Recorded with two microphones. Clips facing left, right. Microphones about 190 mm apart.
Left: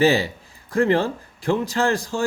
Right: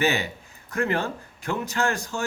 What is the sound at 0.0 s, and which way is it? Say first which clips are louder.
A man's voice: left 7 dB; 35° left (ahead or behind).